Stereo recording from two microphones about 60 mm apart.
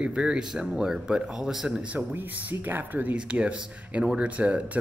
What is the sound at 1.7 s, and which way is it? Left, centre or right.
Speech, right.